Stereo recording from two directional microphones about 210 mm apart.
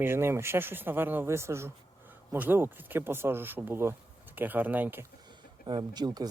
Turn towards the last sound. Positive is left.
turn(degrees=-20)  # may be behind; listen again after turning